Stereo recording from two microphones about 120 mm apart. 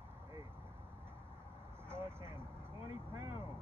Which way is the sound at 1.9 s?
20° right (ahead or behind).